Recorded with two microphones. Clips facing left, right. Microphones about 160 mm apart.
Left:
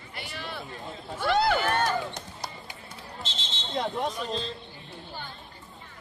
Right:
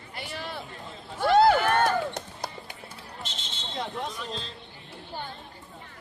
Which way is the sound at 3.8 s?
40° left (ahead or behind).